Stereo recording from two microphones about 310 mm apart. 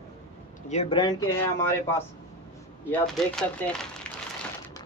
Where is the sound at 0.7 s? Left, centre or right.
Centre.